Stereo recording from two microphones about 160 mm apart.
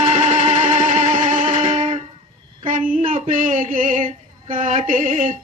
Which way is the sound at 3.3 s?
50° right (ahead or behind).